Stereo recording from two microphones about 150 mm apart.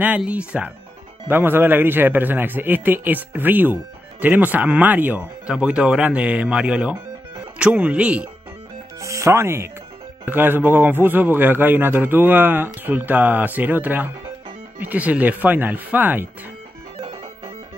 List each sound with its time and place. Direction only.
0.0 s speech: 10° right (ahead or behind)
9.0 s speech: 20° right (ahead or behind)
17.0 s music: 35° right (ahead or behind)